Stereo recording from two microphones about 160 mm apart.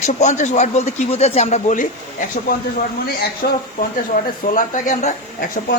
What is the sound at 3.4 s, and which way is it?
Speech, 90° left.